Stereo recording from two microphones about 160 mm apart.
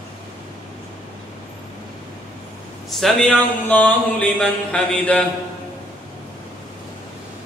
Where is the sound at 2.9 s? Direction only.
Centre (ahead or behind).